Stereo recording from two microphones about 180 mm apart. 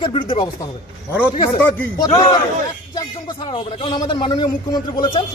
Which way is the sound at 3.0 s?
25° left (ahead or behind).